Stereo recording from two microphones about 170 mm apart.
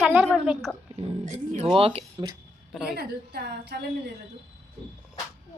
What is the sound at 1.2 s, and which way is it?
Speech, 45° right (ahead or behind).